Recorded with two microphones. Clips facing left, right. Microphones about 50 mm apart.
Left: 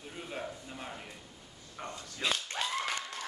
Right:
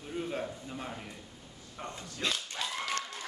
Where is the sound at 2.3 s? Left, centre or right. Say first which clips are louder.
Left 4 dB; left.